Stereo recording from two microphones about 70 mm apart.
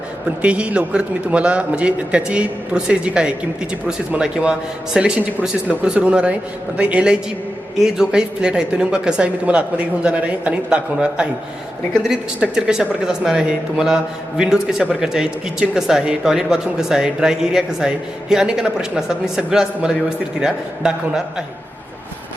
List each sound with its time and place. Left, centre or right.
0.3 s speech: centre